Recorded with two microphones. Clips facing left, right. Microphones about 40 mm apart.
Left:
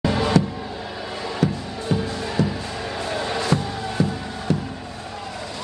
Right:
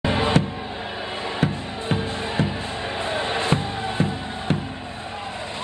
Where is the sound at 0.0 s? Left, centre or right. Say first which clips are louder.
Left 1 dB; right.